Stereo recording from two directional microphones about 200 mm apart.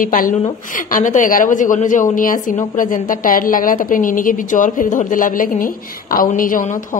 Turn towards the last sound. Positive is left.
turn(degrees=40)  # may be behind; listen again after turning